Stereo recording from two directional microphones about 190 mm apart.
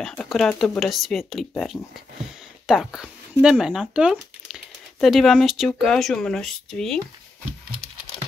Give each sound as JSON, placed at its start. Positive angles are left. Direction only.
{"t": 0.2, "sound": "speech", "side_deg": 0}